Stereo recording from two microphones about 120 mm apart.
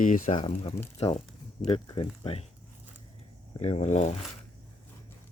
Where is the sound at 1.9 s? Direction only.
50° left (ahead or behind).